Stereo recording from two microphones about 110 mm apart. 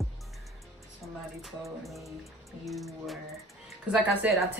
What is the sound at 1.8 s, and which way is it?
Music, centre (ahead or behind).